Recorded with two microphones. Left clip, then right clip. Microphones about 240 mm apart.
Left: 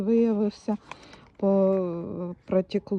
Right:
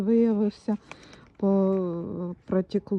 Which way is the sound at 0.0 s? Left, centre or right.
Left.